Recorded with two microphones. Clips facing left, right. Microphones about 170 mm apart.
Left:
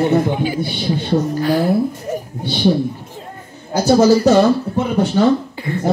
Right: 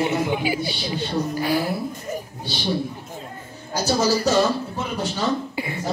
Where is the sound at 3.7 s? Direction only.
60° left (ahead or behind).